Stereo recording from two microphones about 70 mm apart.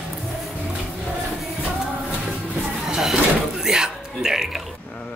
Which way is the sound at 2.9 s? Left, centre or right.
Centre.